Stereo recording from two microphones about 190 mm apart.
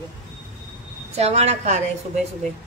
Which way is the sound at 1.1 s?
35° right (ahead or behind).